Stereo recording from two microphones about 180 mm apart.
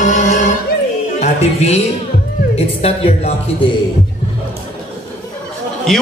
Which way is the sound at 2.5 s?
35° left (ahead or behind).